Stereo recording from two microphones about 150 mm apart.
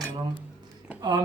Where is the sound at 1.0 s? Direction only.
25° right (ahead or behind).